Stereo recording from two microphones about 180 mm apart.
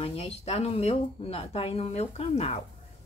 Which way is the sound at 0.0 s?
30° left (ahead or behind).